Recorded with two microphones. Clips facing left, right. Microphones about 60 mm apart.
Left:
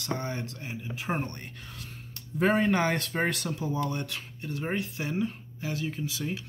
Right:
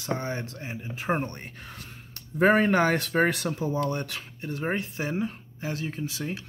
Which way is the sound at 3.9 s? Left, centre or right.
Right.